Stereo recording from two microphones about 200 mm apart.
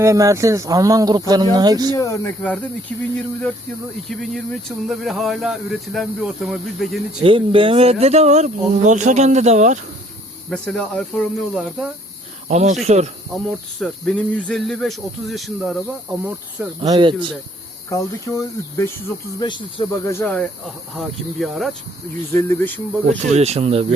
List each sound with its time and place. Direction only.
0.0 s speech: 15° right (ahead or behind)
2.0 s speech: 15° left (ahead or behind)
4.1 s speech: centre (ahead or behind)
7.2 s speech: 25° right (ahead or behind)
10.5 s speech: 5° left (ahead or behind)
12.5 s speech: 35° right (ahead or behind)
13.3 s speech: centre (ahead or behind)
16.8 s speech: 20° right (ahead or behind)
17.8 s speech: 15° left (ahead or behind); by 21.8 s centre (ahead or behind)
22.3 s speech: 15° left (ahead or behind)
23.0 s speech: 35° right (ahead or behind)